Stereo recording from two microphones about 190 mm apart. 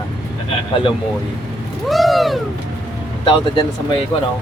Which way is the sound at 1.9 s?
Centre (ahead or behind).